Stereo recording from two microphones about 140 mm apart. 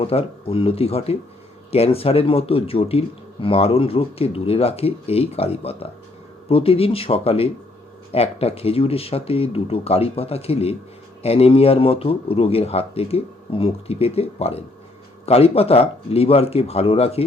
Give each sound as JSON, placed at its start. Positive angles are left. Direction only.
{"t": 0.0, "sound": "a man's voice", "side_deg": 45}